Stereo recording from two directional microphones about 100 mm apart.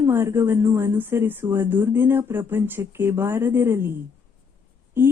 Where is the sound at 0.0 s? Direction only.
25° right (ahead or behind).